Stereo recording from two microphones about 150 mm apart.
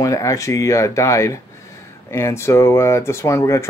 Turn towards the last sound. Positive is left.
turn(degrees=20)  # may be behind; listen again after turning